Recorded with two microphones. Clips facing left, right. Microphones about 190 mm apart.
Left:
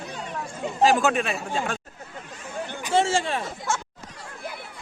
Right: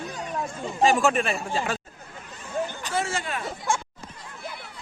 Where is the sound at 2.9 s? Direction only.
30° left (ahead or behind).